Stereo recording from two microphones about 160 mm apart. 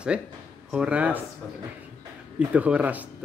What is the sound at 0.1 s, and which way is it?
Speech, 5° right (ahead or behind).